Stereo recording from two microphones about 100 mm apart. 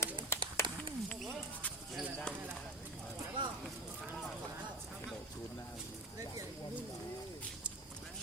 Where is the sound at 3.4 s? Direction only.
55° right (ahead or behind).